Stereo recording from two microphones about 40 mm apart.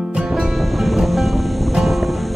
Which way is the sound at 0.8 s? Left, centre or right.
Centre.